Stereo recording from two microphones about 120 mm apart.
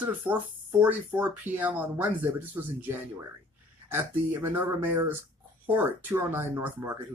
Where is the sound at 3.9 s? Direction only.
15° right (ahead or behind).